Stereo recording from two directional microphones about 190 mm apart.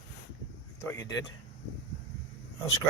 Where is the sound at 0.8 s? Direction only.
15° left (ahead or behind).